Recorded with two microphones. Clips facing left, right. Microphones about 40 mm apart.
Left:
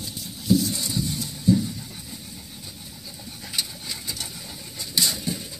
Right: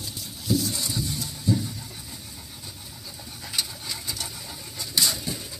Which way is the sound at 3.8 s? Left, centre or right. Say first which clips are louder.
Even; centre.